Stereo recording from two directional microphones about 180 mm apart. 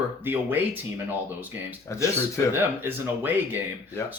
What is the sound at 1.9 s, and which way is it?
Speech, 15° left (ahead or behind).